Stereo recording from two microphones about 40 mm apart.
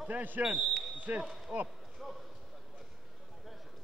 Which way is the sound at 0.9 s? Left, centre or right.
Right.